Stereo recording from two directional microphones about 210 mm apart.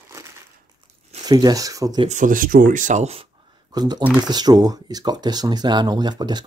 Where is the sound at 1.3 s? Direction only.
20° right (ahead or behind).